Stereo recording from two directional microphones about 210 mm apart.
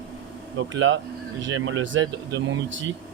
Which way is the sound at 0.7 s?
65° right (ahead or behind).